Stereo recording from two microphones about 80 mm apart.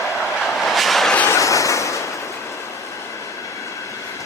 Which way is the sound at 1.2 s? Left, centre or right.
Left.